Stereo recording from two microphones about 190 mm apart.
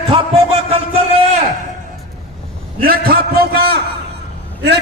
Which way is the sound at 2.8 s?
55° right (ahead or behind).